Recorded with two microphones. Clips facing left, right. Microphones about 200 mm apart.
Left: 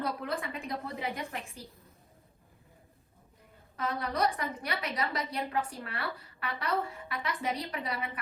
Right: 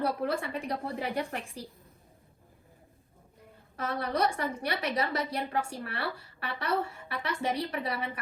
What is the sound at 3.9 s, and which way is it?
A woman's voice, 30° right (ahead or behind).